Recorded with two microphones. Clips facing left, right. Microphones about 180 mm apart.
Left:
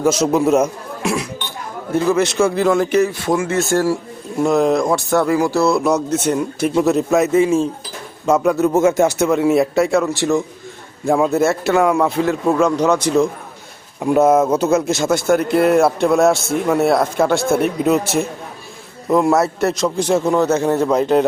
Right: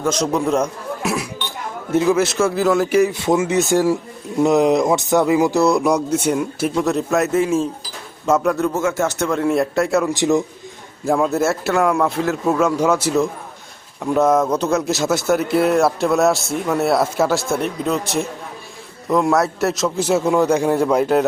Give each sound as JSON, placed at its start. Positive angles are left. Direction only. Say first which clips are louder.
{"t": 0.0, "sound": "a man's voice", "louder": "left 4 dB", "side_deg": 5}
{"t": 1.9, "sound": "speech", "louder": "right 1 dB", "side_deg": -20}
{"t": 2.1, "sound": "speech", "louder": "left 2 dB", "side_deg": 0}
{"t": 3.1, "sound": "speech", "louder": "right 1 dB", "side_deg": -20}
{"t": 8.7, "sound": "speech", "louder": "left 6 dB", "side_deg": 20}
{"t": 9.1, "sound": "speech", "louder": "left 4 dB", "side_deg": 5}
{"t": 10.1, "sound": "speech", "louder": "right 1 dB", "side_deg": -20}
{"t": 11.0, "sound": "speech", "louder": "left 2 dB", "side_deg": 0}
{"t": 14.0, "sound": "a man's voice", "louder": "left 3 dB", "side_deg": 10}